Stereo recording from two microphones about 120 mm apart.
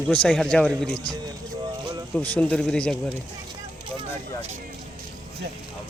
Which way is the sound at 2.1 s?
10° left (ahead or behind).